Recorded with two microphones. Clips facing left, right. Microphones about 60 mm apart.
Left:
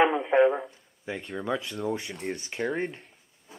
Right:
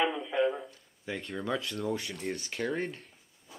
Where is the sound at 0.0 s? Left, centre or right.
Left.